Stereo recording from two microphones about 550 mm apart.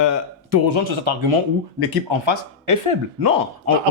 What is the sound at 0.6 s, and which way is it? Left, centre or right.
Speech, right.